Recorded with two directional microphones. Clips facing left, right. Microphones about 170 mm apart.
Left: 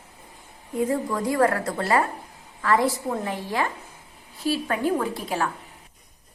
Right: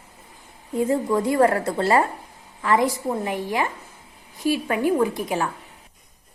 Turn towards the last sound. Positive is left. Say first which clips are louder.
# right 4 dB
turn(degrees=-15)  # may be behind; listen again after turning